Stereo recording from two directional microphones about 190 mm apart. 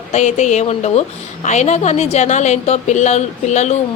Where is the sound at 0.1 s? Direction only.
35° left (ahead or behind).